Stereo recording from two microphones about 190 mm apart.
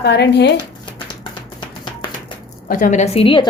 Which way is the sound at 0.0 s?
60° left (ahead or behind).